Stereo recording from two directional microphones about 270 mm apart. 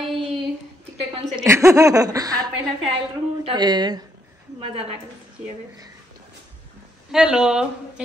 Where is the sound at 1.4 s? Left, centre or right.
Centre.